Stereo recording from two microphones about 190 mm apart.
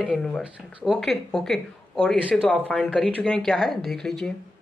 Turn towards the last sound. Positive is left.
turn(degrees=5)  # may be behind; listen again after turning